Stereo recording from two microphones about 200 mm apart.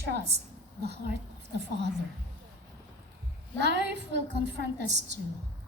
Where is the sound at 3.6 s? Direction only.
60° right (ahead or behind).